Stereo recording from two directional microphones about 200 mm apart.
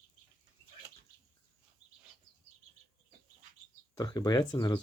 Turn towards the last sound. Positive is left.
turn(degrees=20)  # may be behind; listen again after turning